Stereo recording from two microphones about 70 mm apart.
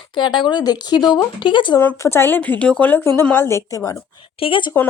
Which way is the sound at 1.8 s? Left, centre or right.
Left.